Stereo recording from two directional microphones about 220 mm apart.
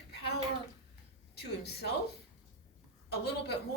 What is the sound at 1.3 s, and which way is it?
Speech, 50° left (ahead or behind).